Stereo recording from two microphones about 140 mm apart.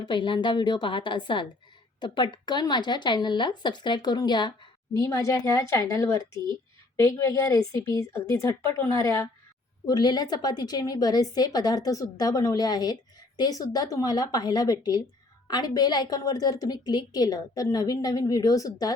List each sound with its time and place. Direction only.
0.0 s a woman's voice: 35° left (ahead or behind)